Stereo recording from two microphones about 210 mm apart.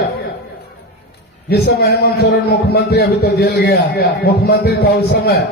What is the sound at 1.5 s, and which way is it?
A man's voice, 50° left (ahead or behind).